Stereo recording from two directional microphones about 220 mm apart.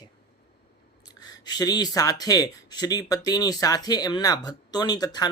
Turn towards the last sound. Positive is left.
turn(degrees=20)  # may be behind; listen again after turning